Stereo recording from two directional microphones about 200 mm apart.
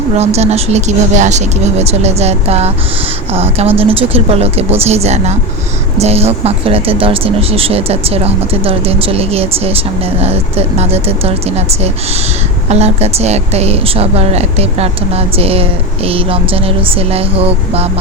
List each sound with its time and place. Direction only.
0.2 s a woman's voice: 30° right (ahead or behind)